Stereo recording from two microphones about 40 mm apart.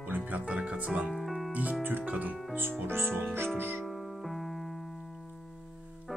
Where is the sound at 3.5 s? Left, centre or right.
Right.